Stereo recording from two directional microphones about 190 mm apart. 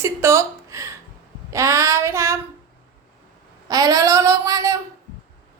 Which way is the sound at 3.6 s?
20° right (ahead or behind).